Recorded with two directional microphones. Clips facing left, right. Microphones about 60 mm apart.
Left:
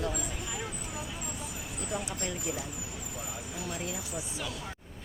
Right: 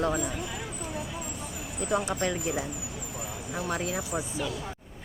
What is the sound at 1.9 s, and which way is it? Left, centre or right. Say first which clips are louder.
Speech: right 9 dB; right.